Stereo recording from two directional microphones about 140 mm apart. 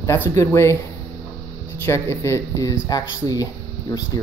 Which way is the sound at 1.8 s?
20° left (ahead or behind).